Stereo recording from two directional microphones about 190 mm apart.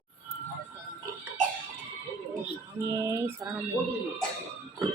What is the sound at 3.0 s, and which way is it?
Speech, 15° right (ahead or behind).